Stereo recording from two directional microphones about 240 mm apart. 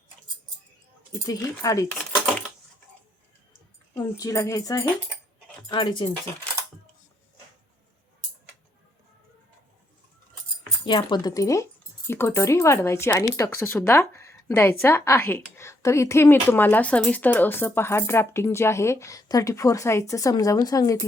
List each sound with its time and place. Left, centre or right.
1.1 s speech: centre
3.9 s speech: centre
10.8 s speech: centre